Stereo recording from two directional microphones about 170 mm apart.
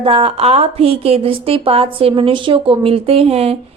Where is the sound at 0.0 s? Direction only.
35° right (ahead or behind).